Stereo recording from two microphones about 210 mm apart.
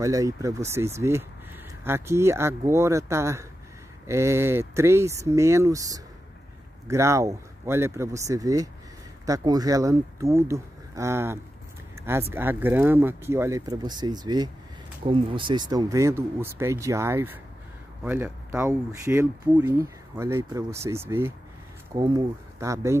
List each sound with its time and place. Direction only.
0.0 s speech: 15° right (ahead or behind)